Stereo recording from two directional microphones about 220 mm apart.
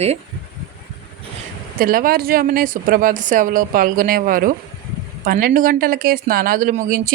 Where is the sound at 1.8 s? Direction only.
40° right (ahead or behind).